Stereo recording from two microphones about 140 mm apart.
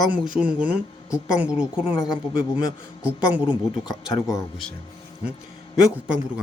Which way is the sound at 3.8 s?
25° left (ahead or behind).